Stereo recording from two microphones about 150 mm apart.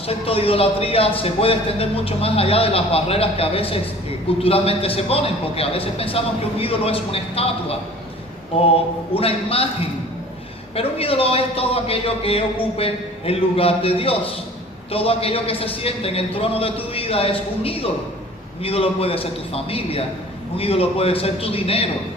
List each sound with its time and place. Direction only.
0.1 s a man's voice: 40° left (ahead or behind)
10.8 s a man's voice: 40° left (ahead or behind)